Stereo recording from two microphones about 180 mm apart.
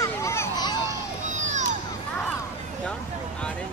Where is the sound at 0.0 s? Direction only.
15° left (ahead or behind).